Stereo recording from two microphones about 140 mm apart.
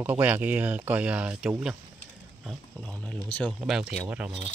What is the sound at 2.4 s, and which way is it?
Speech, 5° left (ahead or behind).